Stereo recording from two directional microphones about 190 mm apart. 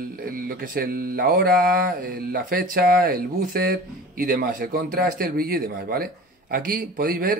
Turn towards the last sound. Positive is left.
turn(degrees=-50)  # may be behind; listen again after turning